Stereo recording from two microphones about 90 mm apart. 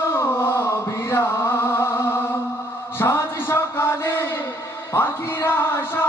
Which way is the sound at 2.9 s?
25° left (ahead or behind).